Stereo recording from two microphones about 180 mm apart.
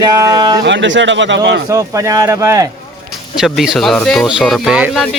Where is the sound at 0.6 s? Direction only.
90° right.